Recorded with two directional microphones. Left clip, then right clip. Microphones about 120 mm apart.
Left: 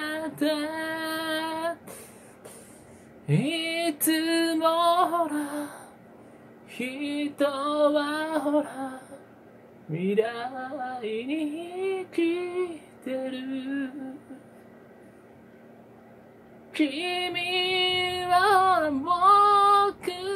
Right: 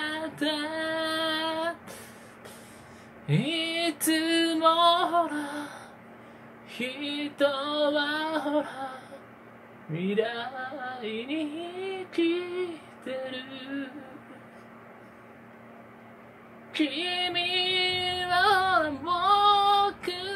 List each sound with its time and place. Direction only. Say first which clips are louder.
0.0 s female singing: left 2 dB; 25° left (ahead or behind)
3.3 s music: left 1 dB; 30° left (ahead or behind)
6.8 s a sound: left 2 dB; 30° left (ahead or behind)
9.9 s female singing: left 2 dB; 30° left (ahead or behind)
16.7 s female singing: left 1 dB; 35° left (ahead or behind)